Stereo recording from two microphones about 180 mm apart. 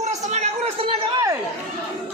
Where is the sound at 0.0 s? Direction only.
40° right (ahead or behind).